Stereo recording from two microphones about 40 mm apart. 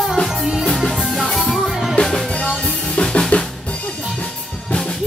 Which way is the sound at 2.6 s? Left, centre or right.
Left.